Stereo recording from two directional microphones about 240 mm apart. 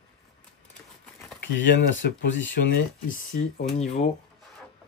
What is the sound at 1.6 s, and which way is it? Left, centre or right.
Speech, left.